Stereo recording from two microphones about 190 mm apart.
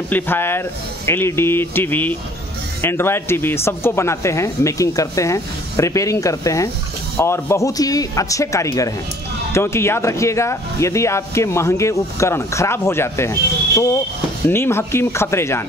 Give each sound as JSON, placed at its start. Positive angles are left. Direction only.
{"t": 0.1, "sound": "speech", "side_deg": 10}